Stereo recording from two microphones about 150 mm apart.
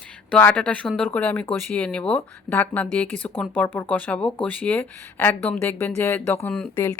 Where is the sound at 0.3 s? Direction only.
10° left (ahead or behind).